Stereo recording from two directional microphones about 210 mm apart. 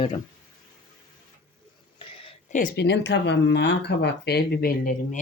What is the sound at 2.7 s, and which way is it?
Speech, 55° left (ahead or behind).